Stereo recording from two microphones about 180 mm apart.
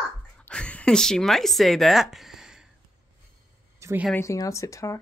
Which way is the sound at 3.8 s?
15° right (ahead or behind).